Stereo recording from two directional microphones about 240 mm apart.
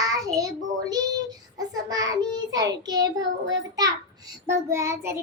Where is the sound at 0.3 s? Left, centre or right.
Centre.